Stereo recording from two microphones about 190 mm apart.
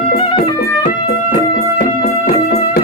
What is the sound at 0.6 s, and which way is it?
Music, 45° left (ahead or behind).